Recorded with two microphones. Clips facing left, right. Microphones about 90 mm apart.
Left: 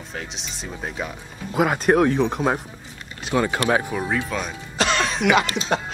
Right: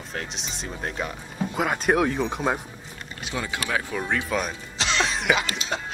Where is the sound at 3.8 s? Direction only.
10° left (ahead or behind).